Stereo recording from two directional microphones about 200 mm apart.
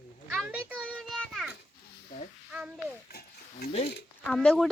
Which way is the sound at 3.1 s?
50° left (ahead or behind).